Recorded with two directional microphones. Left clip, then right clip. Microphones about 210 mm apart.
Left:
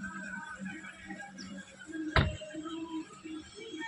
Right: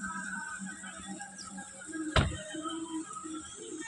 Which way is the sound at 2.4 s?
25° left (ahead or behind).